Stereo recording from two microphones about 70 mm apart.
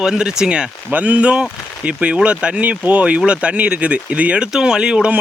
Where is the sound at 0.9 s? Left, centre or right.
Right.